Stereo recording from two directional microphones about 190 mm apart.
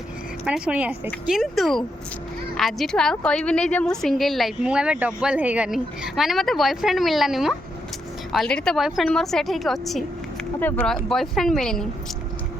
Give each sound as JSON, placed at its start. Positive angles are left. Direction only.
{"t": 0.4, "sound": "a woman's voice", "side_deg": -5}